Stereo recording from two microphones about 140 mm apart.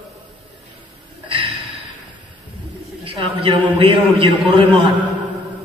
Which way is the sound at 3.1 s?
40° right (ahead or behind).